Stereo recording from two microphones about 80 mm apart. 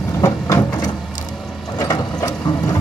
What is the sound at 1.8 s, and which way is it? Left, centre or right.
Mechanisms, left.